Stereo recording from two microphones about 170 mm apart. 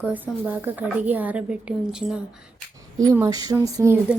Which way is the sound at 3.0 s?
20° right (ahead or behind).